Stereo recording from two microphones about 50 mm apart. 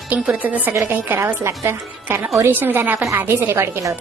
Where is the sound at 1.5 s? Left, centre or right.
Right.